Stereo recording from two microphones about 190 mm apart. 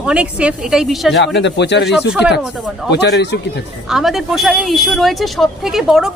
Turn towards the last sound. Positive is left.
turn(degrees=0)  # may be behind; listen again after turning